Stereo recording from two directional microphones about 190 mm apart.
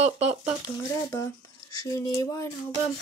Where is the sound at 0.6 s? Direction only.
15° left (ahead or behind).